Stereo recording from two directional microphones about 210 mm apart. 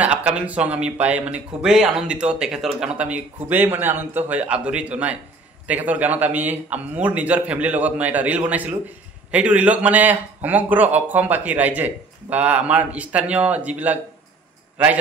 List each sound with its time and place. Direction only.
0.0 s speech: 5° right (ahead or behind)